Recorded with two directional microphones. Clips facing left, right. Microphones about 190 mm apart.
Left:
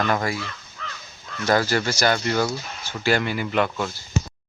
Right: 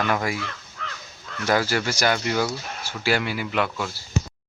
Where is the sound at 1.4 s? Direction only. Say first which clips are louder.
Left 2 dB; 10° right (ahead or behind).